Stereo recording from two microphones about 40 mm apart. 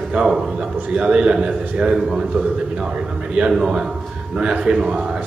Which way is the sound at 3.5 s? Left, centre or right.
Centre.